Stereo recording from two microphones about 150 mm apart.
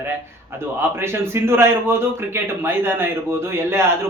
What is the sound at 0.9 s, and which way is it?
A man's voice, 15° right (ahead or behind).